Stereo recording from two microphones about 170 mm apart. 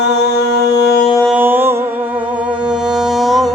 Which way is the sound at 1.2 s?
10° right (ahead or behind).